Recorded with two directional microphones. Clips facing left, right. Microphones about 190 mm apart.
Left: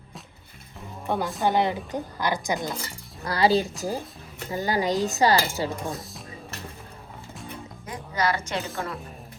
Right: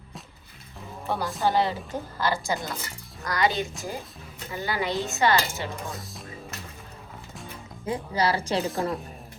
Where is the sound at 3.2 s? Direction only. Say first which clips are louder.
Left 4 dB; 30° left (ahead or behind).